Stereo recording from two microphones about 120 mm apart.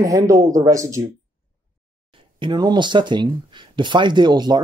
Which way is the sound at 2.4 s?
35° right (ahead or behind).